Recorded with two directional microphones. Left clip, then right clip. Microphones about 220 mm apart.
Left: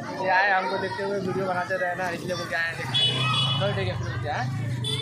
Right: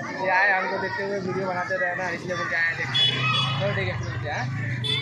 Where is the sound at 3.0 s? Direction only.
15° left (ahead or behind).